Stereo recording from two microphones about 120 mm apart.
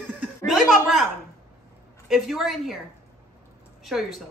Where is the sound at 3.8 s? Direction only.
Centre (ahead or behind).